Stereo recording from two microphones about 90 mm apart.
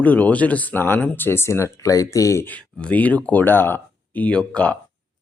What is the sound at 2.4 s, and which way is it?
Speech, 15° left (ahead or behind).